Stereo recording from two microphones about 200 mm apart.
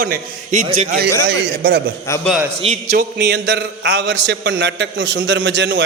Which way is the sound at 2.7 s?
50° right (ahead or behind).